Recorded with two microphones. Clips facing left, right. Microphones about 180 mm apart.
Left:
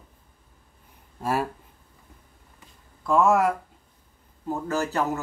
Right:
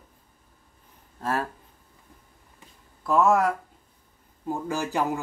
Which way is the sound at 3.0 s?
Centre (ahead or behind).